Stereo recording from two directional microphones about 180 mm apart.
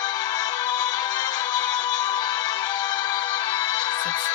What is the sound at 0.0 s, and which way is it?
Music, 20° left (ahead or behind).